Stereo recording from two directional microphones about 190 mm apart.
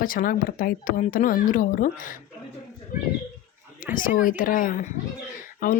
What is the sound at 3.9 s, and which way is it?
Speech, 45° left (ahead or behind).